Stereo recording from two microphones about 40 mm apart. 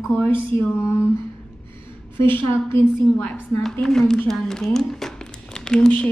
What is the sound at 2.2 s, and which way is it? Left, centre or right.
Speech, left.